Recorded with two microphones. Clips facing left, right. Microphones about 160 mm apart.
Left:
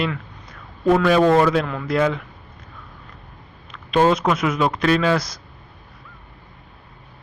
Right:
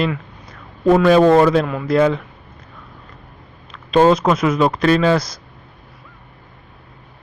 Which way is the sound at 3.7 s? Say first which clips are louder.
Right 4 dB; 35° right (ahead or behind).